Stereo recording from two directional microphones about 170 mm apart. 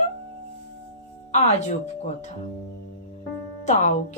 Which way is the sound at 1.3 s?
40° left (ahead or behind).